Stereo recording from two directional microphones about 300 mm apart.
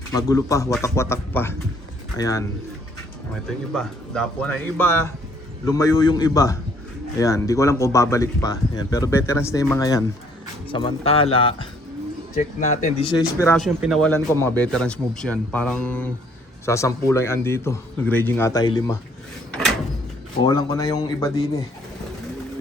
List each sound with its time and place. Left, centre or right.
0.2 s speech: centre
3.7 s speech: centre
19.5 s drawer open or close: centre
20.4 s speech: centre